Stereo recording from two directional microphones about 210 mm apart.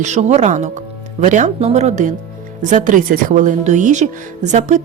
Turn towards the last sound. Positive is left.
turn(degrees=-35)  # may be behind; listen again after turning